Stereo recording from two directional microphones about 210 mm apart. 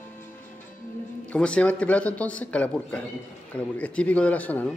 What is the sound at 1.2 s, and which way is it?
Speech, 5° left (ahead or behind).